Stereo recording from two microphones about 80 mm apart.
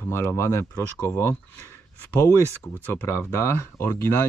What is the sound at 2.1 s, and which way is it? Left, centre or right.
Speech, left.